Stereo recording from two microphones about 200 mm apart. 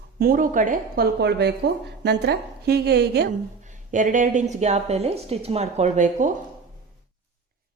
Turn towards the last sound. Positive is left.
turn(degrees=-40)  # may be behind; listen again after turning